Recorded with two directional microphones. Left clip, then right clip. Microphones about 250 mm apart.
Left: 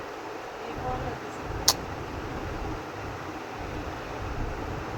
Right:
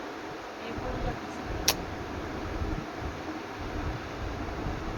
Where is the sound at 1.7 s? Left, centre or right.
Centre.